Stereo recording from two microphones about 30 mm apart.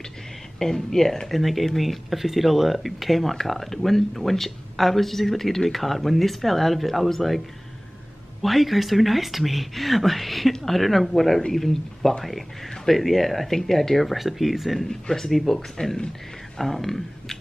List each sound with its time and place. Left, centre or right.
0.6 s speech: centre
1.3 s speech: centre
14.1 s speech: centre
14.9 s speech: centre